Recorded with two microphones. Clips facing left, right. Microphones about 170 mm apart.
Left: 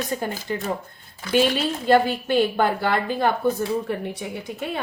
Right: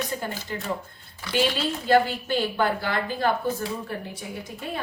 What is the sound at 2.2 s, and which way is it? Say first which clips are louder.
A woman's voice: left 4 dB; 55° left (ahead or behind).